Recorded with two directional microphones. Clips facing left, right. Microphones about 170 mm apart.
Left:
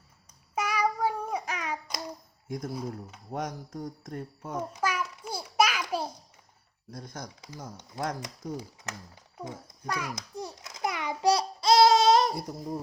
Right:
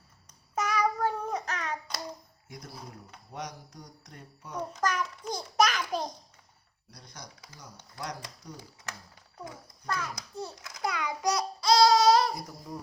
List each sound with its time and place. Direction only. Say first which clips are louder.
0.5 s child singing: even; 10° left (ahead or behind)
2.5 s mantra: left 11 dB; 50° left (ahead or behind)
4.7 s a sound: right 3 dB; 10° left (ahead or behind)
6.9 s mantra: left 8 dB; 50° left (ahead or behind)
8.5 s a child's voice: left 6 dB; 20° left (ahead or behind)
10.2 s babbling: left 1 dB; 20° left (ahead or behind)